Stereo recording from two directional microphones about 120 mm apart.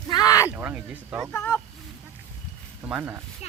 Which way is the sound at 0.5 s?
10° right (ahead or behind).